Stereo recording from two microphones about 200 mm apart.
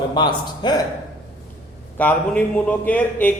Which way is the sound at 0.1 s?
20° left (ahead or behind).